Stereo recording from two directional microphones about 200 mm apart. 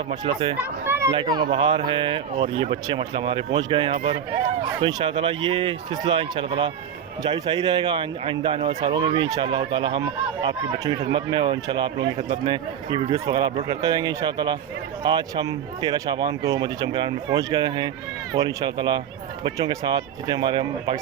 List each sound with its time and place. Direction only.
0.1 s a man's voice: 25° right (ahead or behind)
0.9 s a sound: 15° right (ahead or behind)
1.1 s a man's voice: 25° right (ahead or behind)